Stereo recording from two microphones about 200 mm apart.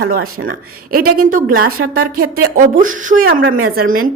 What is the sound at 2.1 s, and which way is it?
A woman's voice, 45° right (ahead or behind).